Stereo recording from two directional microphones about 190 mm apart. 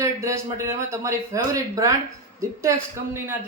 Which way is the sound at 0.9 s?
15° right (ahead or behind).